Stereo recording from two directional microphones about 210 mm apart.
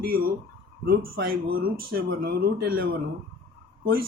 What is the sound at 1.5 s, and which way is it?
Speech, 45° right (ahead or behind).